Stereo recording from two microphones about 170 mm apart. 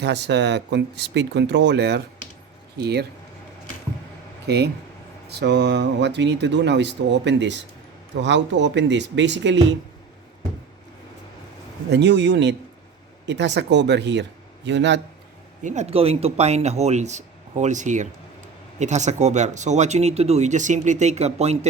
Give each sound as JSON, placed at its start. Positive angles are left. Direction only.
{"t": 0.0, "sound": "speech", "side_deg": -90}
{"t": 4.4, "sound": "speech", "side_deg": -75}
{"t": 11.9, "sound": "a man's voice", "side_deg": -85}
{"t": 15.6, "sound": "speech", "side_deg": -40}